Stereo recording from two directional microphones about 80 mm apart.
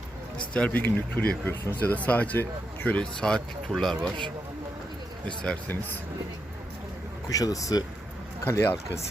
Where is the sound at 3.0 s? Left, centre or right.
Centre.